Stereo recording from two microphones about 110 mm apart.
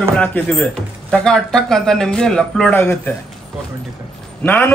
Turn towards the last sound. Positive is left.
turn(degrees=15)  # may be behind; listen again after turning